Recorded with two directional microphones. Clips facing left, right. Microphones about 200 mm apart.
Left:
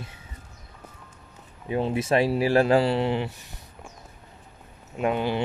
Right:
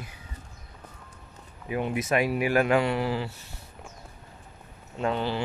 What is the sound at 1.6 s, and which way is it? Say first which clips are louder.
Speech: left 3 dB; 30° left (ahead or behind).